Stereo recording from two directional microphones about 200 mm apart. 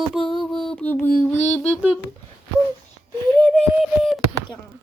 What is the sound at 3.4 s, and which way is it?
Beatboxing, 5° left (ahead or behind).